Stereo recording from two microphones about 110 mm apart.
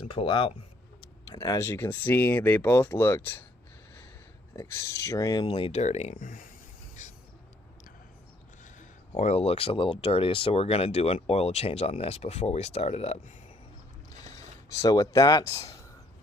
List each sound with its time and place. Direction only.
0.0 s speech: 55° left (ahead or behind)
1.3 s speech: 30° left (ahead or behind)
4.5 s speech: 30° left (ahead or behind)
5.4 s speech: 55° left (ahead or behind)
5.7 s speech: 90° left
9.1 s speech: 90° left; by 13.3 s 70° left (ahead or behind)
14.8 s speech: 35° left (ahead or behind)